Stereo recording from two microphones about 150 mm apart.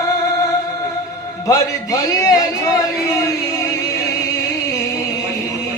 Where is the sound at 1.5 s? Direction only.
20° left (ahead or behind).